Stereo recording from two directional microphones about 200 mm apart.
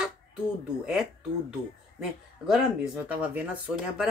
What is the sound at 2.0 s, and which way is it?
Speech, 5° right (ahead or behind).